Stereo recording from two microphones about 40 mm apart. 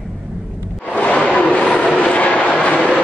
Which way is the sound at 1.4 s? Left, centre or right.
Left.